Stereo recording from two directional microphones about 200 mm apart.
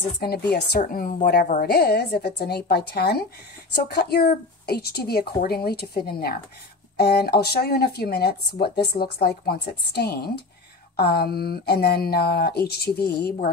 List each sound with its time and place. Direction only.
0.2 s speech: 50° left (ahead or behind)